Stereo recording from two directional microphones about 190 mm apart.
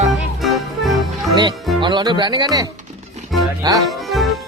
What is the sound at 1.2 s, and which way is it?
Speech, 20° right (ahead or behind).